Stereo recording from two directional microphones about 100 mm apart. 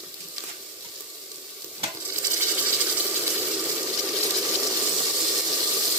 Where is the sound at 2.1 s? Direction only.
25° right (ahead or behind).